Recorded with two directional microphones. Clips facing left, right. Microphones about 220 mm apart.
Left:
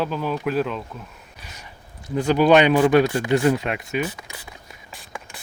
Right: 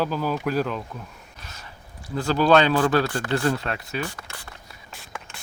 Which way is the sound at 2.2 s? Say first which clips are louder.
Left 3 dB; 15° left (ahead or behind).